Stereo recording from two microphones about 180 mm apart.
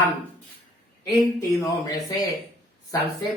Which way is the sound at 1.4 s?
15° left (ahead or behind).